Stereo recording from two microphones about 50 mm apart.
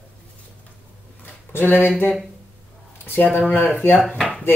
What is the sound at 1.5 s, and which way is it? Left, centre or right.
Speech, left.